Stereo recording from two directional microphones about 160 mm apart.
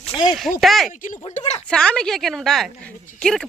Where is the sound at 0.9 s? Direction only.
55° left (ahead or behind).